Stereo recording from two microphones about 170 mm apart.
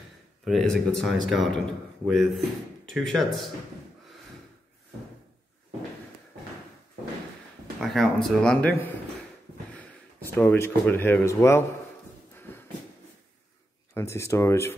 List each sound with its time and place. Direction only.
0.5 s speech: centre (ahead or behind)
7.8 s speech: centre (ahead or behind)
12.4 s a sound: 10° left (ahead or behind)
13.9 s speech: 15° left (ahead or behind)